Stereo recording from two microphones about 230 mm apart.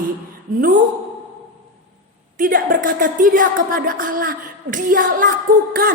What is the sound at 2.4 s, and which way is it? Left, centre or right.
Music, right.